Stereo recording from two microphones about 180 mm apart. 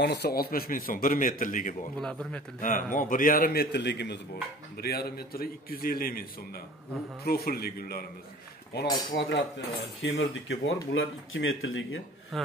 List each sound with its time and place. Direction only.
0.0 s speech: 65° left (ahead or behind); by 1.8 s 50° left (ahead or behind)
2.0 s speech: 5° left (ahead or behind)
2.6 s speech: 50° left (ahead or behind); by 4.2 s 70° left (ahead or behind)
4.8 s a man's voice: 60° left (ahead or behind)
7.2 s a man's voice: 60° left (ahead or behind)
9.1 s cutlery: 80° left
10.0 s speech: 90° left